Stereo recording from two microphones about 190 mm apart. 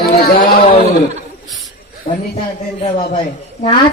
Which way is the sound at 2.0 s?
25° left (ahead or behind).